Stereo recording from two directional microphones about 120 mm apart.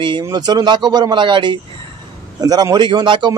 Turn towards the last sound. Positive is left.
turn(degrees=-40)  # may be behind; listen again after turning